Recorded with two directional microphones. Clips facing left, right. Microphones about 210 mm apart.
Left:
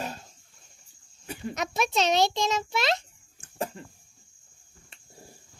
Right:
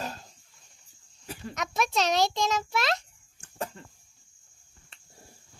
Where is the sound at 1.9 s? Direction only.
Centre (ahead or behind).